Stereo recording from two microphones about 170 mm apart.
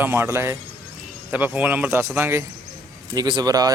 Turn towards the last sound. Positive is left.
turn(degrees=-20)  # may be behind; listen again after turning